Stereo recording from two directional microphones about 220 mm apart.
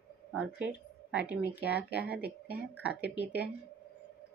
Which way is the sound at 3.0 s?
50° left (ahead or behind).